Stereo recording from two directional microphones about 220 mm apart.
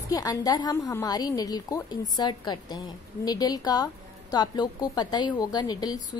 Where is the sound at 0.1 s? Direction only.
15° left (ahead or behind).